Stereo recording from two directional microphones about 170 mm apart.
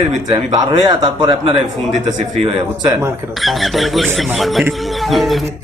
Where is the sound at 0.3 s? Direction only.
25° right (ahead or behind).